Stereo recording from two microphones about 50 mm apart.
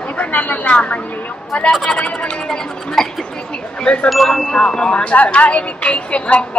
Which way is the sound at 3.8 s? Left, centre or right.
Left.